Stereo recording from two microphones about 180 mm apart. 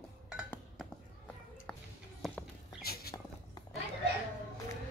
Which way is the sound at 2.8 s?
60° left (ahead or behind).